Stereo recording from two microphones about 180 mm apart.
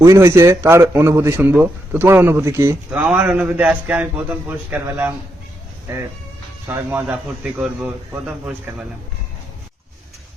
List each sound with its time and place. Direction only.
0.0 s a man's voice: 15° right (ahead or behind)